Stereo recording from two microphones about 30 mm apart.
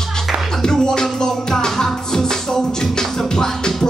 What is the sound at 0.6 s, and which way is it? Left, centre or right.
Music, left.